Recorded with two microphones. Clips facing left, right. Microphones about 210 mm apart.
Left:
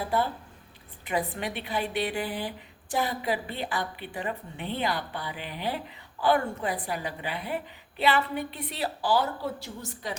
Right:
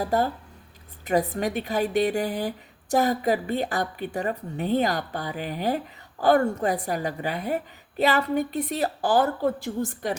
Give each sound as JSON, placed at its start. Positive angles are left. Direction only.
{"t": 0.0, "sound": "a woman's voice", "side_deg": -40}